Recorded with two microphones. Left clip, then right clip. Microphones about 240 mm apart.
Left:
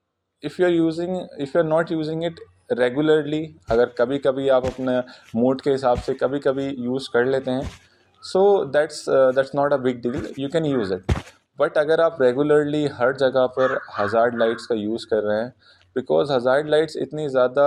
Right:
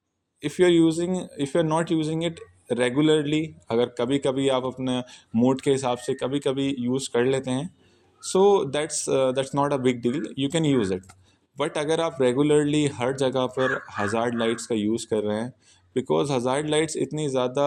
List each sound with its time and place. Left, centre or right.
0.4 s speech: right
3.2 s speech: centre
3.7 s speech: right